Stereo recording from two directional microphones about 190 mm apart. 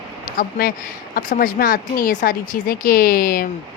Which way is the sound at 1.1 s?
50° left (ahead or behind).